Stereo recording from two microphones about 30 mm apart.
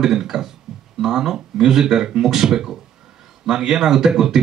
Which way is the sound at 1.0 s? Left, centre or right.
Centre.